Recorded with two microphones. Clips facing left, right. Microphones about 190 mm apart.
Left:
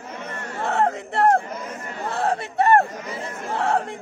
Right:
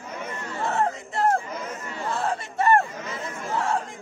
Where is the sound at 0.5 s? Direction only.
60° left (ahead or behind).